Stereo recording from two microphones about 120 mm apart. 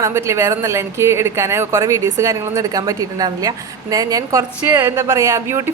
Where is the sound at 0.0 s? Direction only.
25° right (ahead or behind).